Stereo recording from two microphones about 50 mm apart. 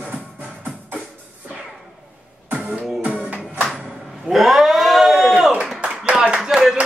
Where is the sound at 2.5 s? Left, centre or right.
Right.